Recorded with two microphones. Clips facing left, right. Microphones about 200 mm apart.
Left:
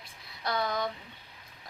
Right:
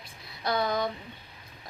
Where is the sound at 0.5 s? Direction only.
25° right (ahead or behind).